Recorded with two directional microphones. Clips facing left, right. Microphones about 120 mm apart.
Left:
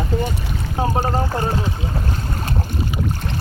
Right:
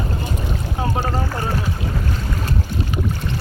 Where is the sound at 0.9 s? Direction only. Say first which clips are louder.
Left 3 dB; 30° left (ahead or behind).